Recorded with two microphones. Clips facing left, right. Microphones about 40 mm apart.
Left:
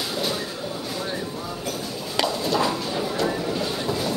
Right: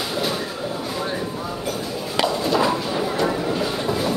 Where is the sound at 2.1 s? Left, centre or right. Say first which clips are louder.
Right 3 dB; centre.